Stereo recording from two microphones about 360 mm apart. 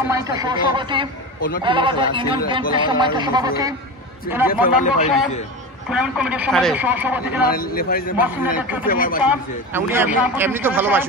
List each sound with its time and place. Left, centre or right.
0.1 s speech: centre
4.5 s speech: left
5.9 s a man's voice: centre
7.4 s speech: left
8.2 s a man's voice: centre
8.8 s speech: left
9.2 s a man's voice: centre